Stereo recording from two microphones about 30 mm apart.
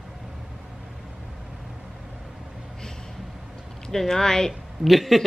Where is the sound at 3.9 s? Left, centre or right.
Centre.